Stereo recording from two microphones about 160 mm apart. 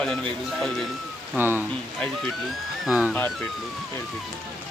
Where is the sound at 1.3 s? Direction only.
15° right (ahead or behind).